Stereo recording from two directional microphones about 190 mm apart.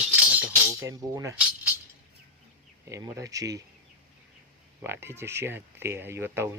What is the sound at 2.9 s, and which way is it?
Speech, 15° right (ahead or behind).